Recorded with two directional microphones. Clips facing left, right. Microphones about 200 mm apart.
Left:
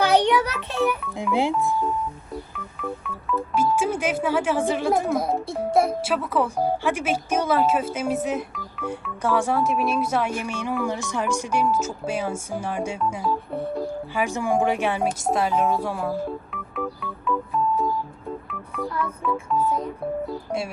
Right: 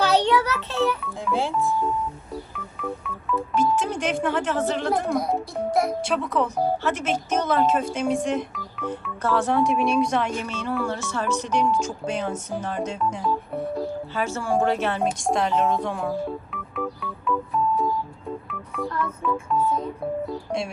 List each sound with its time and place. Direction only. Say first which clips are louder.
0.0 s music: left 1 dB; 15° left (ahead or behind)
1.1 s speech: left 3 dB; 15° left (ahead or behind)
2.7 s speech: even; centre (ahead or behind)
14.1 s a sound: left 3 dB; 15° left (ahead or behind)
18.4 s telephone dialing: even; centre (ahead or behind)